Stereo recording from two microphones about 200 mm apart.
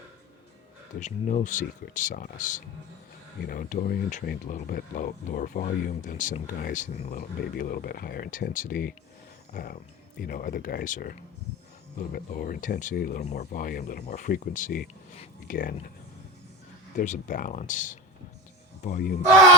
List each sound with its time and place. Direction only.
0.9 s speech: 40° left (ahead or behind)
7.2 s speech: 50° left (ahead or behind)
17.0 s speech: 40° left (ahead or behind)